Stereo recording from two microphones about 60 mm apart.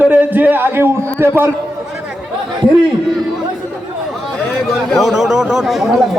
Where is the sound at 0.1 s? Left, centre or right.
Right.